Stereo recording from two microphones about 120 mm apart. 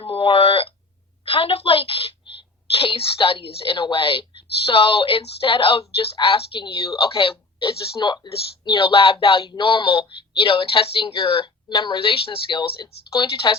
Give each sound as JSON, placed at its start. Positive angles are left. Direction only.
{"t": 0.0, "sound": "a woman's voice", "side_deg": 50}